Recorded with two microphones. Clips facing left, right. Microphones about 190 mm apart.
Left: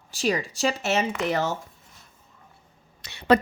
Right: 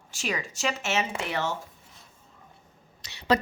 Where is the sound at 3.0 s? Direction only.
55° left (ahead or behind).